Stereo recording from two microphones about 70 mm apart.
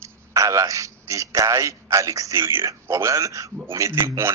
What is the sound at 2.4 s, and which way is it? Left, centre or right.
A man's voice, right.